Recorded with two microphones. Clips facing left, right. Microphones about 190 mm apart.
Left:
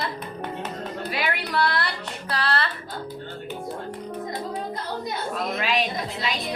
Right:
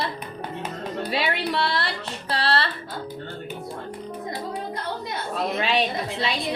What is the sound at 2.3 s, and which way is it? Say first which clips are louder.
Music: right 2 dB; 30° right (ahead or behind).